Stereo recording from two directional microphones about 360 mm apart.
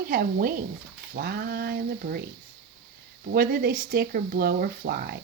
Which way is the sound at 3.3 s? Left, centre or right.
Right.